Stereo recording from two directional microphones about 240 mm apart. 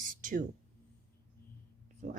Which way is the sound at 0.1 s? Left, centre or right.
Right.